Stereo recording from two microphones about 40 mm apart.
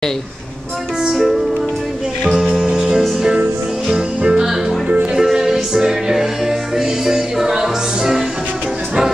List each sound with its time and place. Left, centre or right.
1.0 s music: centre
2.4 s music: right
2.7 s music: centre
4.2 s music: centre